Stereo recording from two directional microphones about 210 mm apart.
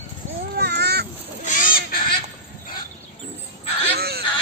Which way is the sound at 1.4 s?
40° left (ahead or behind).